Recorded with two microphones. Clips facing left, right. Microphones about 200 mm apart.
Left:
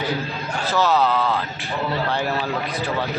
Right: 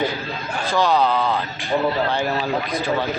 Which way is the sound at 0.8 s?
5° left (ahead or behind).